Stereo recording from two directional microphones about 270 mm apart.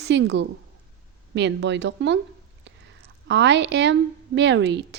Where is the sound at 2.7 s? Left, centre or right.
Right.